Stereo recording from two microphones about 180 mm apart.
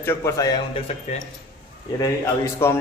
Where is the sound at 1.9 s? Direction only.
20° left (ahead or behind).